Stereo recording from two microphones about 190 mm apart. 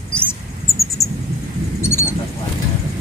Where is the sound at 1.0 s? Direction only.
15° left (ahead or behind).